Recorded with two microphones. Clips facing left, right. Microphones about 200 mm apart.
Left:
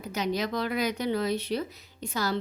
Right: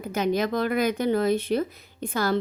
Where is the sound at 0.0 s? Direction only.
50° right (ahead or behind).